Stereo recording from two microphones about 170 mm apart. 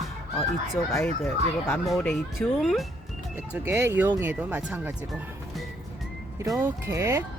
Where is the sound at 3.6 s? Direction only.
15° right (ahead or behind).